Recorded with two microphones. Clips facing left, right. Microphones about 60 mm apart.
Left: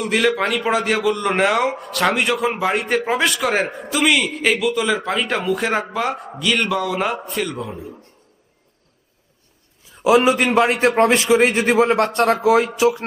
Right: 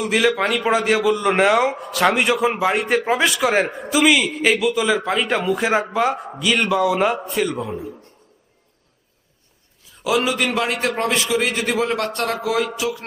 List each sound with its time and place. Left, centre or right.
0.0 s a man's voice: centre
10.0 s a man's voice: left
11.8 s a man's voice: left
12.4 s speech: left